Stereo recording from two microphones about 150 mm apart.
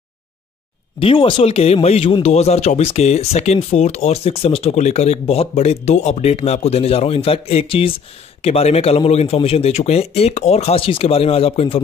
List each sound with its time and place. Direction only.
0.9 s speech: 35° left (ahead or behind)